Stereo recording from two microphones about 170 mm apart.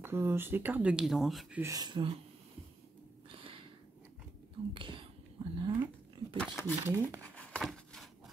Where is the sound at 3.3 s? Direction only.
30° right (ahead or behind).